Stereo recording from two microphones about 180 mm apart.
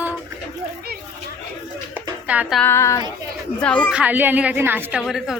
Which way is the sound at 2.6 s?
15° left (ahead or behind).